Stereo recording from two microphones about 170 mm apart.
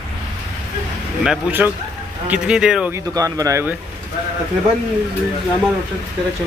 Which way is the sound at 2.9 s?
20° right (ahead or behind).